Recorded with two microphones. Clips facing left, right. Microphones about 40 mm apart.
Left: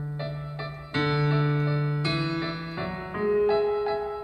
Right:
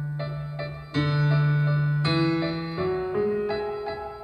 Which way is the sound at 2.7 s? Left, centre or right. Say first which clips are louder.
Right 7 dB; left.